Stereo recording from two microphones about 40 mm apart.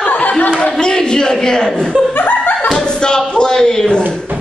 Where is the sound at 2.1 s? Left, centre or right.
Left.